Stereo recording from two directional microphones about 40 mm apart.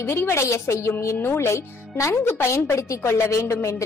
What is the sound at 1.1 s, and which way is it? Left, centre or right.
A woman's voice, left.